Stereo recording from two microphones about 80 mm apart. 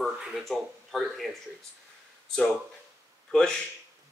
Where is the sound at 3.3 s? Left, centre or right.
Centre.